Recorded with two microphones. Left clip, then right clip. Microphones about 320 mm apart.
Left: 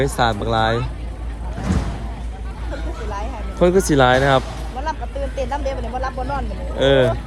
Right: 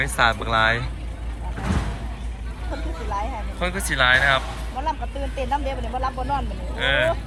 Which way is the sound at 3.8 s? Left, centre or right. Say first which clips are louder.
Left 3 dB; centre.